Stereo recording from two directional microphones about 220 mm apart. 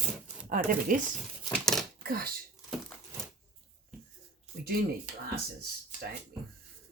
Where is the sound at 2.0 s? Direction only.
45° right (ahead or behind).